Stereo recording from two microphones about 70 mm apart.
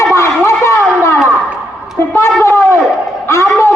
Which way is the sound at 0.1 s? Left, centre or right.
Left.